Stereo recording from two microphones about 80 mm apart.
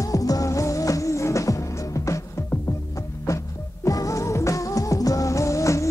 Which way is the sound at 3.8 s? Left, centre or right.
Left.